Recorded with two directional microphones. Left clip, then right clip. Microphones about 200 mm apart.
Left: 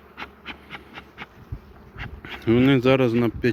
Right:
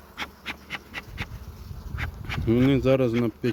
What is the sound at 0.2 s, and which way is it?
Bee, 45° right (ahead or behind).